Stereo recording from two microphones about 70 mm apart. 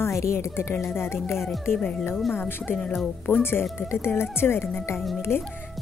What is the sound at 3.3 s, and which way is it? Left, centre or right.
A woman's voice, left.